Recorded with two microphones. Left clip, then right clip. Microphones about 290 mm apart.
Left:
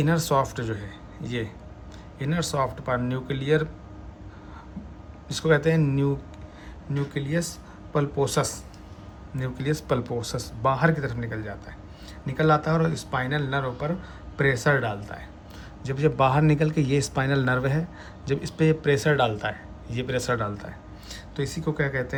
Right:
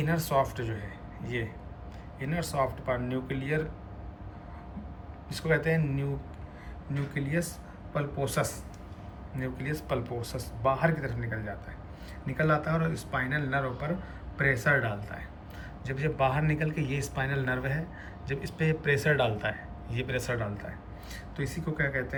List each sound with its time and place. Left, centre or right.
0.0 s a man's voice: centre
5.3 s a man's voice: centre
7.1 s a man's voice: centre